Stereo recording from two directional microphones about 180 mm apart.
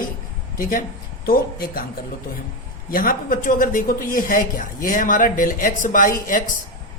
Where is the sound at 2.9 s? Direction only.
50° left (ahead or behind).